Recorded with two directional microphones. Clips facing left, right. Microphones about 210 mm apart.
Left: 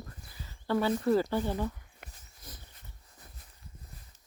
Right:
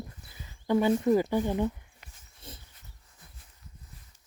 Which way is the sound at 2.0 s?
55° left (ahead or behind).